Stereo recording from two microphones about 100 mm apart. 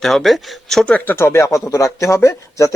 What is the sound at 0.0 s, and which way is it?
Speech, centre (ahead or behind).